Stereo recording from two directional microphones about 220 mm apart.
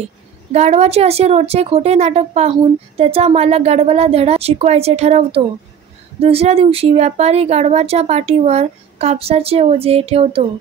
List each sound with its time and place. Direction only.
0.5 s a woman's voice: 30° right (ahead or behind)